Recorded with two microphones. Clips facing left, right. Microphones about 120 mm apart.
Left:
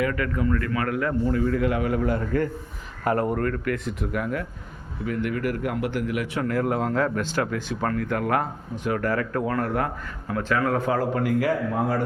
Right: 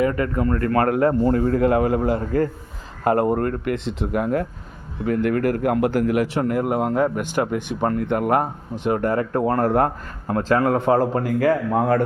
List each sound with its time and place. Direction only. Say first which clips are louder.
0.0 s a man's voice: right 5 dB; 35° right (ahead or behind)
0.4 s a man's voice: right 7 dB; 45° right (ahead or behind); by 4.4 s 25° right (ahead or behind)
5.0 s a man's voice: right 6 dB; 40° right (ahead or behind)
6.5 s speech: right 3 dB; 15° right (ahead or behind); by 12.0 s 55° right (ahead or behind)